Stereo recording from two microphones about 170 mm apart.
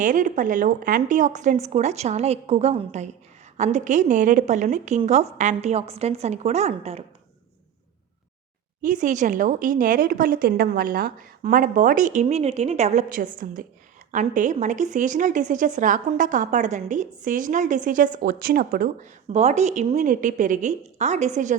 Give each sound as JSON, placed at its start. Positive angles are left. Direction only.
{"t": 0.0, "sound": "a woman's voice", "side_deg": -50}
{"t": 8.8, "sound": "a woman's voice", "side_deg": -50}